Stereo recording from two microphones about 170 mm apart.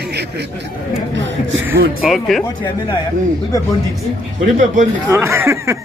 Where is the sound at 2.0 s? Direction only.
Centre (ahead or behind).